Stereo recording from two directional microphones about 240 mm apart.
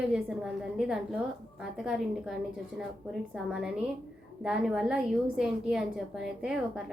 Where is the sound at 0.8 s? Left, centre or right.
Centre.